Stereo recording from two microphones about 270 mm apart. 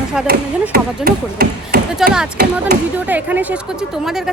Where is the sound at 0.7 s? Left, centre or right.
Right.